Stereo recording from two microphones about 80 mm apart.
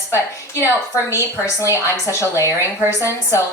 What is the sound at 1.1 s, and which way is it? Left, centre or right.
A woman's voice, left.